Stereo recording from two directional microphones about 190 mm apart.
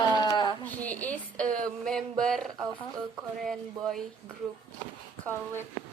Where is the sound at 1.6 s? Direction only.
5° left (ahead or behind).